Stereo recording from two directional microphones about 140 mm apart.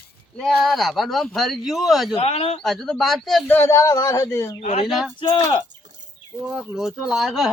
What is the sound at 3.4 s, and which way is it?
A man's voice, 15° left (ahead or behind).